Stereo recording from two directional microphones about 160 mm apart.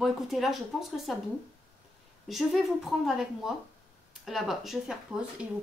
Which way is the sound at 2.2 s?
Centre (ahead or behind).